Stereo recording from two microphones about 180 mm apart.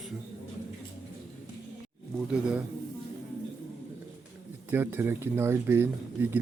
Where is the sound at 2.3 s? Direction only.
5° right (ahead or behind).